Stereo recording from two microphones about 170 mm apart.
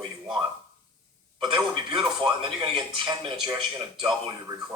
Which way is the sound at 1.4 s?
25° right (ahead or behind).